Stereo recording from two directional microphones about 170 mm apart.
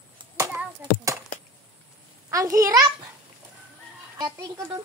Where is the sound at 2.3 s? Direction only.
20° right (ahead or behind).